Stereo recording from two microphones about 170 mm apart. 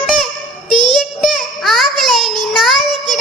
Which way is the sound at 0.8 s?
25° right (ahead or behind).